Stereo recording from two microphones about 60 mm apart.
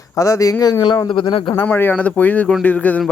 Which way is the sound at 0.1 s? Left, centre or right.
Left.